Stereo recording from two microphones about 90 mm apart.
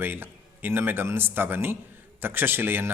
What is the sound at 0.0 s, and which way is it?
Speech, 25° right (ahead or behind).